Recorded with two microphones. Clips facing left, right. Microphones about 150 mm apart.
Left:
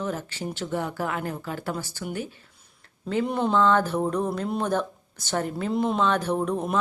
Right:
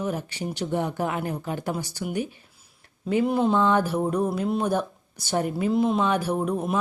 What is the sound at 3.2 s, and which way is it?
Speech, centre (ahead or behind).